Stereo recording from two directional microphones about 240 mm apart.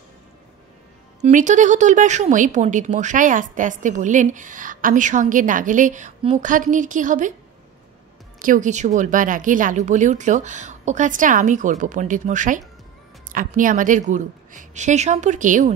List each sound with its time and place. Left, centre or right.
1.2 s speech: right
8.4 s speech: right